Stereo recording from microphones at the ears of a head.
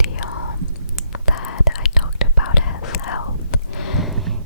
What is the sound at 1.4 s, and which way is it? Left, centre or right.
Whispering, left.